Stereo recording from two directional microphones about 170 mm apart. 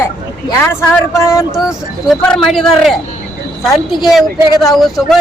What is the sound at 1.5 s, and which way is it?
A man's voice, centre (ahead or behind).